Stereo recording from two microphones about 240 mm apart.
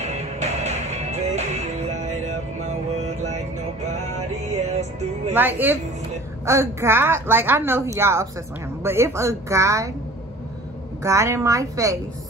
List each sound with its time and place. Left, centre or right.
0.0 s music: right
5.3 s a woman's voice: centre
11.0 s a woman's voice: centre